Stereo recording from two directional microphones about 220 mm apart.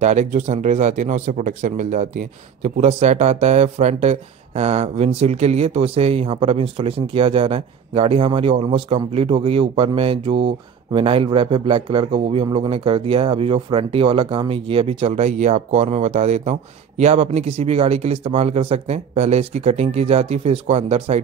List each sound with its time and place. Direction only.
0.0 s speech: 30° right (ahead or behind)